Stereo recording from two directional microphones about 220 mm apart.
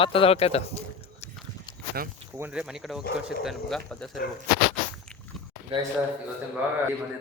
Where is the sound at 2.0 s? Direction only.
45° right (ahead or behind).